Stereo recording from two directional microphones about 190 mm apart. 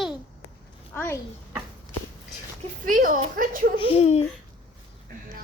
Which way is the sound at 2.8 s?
45° right (ahead or behind).